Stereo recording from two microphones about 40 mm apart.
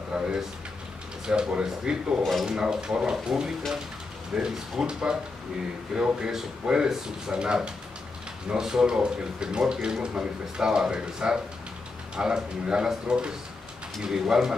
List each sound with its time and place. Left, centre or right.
0.1 s speech: centre
5.9 s speech: centre
6.6 s speech: centre